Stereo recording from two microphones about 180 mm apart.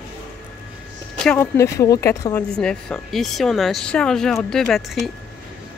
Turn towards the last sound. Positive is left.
turn(degrees=0)  # may be behind; listen again after turning